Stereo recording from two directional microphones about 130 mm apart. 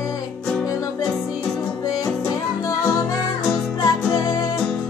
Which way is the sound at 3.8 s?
25° left (ahead or behind).